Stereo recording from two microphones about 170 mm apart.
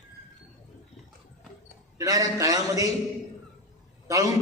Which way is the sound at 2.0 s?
20° right (ahead or behind).